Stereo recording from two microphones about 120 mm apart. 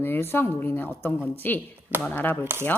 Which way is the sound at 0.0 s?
20° left (ahead or behind).